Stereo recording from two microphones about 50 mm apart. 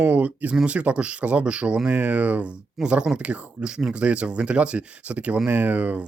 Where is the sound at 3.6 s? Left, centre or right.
Centre; by 6.0 s right.